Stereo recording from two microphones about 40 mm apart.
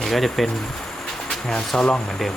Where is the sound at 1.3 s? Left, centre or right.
Centre.